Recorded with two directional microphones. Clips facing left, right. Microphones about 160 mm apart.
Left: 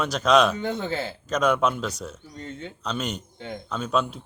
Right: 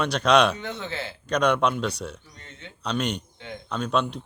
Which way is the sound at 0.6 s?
45° left (ahead or behind).